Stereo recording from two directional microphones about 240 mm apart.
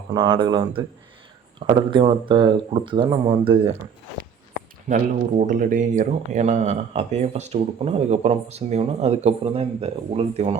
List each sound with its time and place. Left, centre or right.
0.1 s speech: centre
4.9 s speech: right